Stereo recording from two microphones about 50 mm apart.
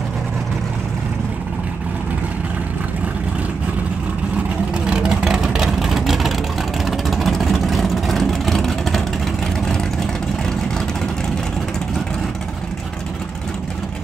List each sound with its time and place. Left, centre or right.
4.8 s vehicle: centre